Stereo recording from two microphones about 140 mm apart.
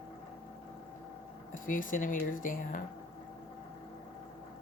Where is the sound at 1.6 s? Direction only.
70° left (ahead or behind).